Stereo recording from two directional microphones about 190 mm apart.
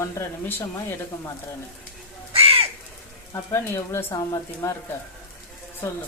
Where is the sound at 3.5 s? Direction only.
15° left (ahead or behind).